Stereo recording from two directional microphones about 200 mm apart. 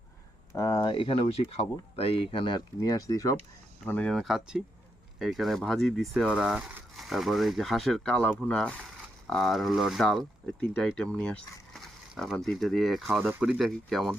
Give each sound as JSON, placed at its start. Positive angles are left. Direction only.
{"t": 0.5, "sound": "speech", "side_deg": 20}
{"t": 3.8, "sound": "speech", "side_deg": 5}